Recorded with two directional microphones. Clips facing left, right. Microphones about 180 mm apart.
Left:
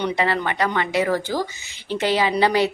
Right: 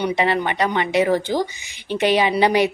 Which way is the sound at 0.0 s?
20° right (ahead or behind).